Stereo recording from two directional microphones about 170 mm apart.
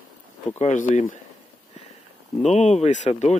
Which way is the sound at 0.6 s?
45° left (ahead or behind).